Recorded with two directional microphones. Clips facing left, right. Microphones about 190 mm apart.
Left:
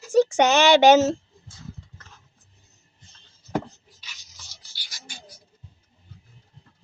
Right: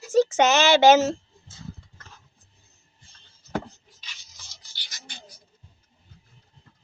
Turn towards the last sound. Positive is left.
turn(degrees=10)  # may be behind; listen again after turning